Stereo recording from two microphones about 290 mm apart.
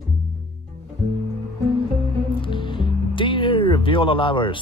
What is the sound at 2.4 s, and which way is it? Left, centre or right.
Music, centre.